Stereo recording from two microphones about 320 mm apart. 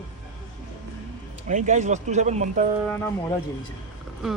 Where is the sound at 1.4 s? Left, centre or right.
Right.